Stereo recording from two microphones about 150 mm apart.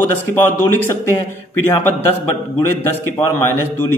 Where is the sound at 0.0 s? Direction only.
15° left (ahead or behind).